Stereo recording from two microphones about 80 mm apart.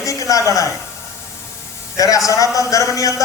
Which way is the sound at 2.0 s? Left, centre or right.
Left.